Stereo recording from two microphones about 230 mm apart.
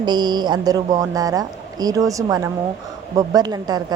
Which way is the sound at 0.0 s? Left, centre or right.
Centre.